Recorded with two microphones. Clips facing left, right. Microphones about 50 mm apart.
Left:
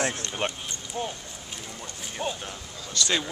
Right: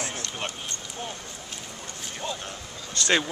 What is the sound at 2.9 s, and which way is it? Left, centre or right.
Speech, right.